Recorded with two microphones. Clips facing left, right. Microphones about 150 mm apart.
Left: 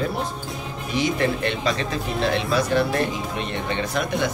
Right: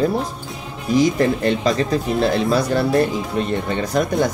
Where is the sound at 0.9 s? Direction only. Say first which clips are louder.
Right 7 dB; 40° right (ahead or behind).